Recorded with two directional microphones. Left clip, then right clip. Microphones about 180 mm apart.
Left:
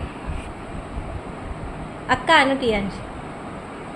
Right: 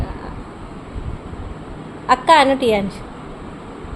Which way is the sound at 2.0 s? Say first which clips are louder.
Right 5 dB; 45° right (ahead or behind).